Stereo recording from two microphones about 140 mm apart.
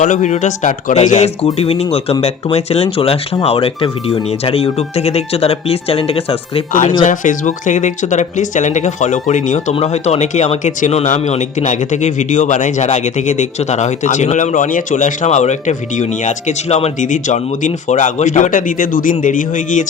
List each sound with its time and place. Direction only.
0.0 s speech: 65° left (ahead or behind); by 6.2 s 45° left (ahead or behind)
7.0 s speech: 65° left (ahead or behind)
9.7 s speech: 50° left (ahead or behind); by 19.8 s 70° left (ahead or behind)